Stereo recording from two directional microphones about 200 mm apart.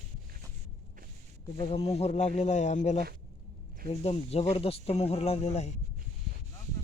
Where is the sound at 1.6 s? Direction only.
30° left (ahead or behind).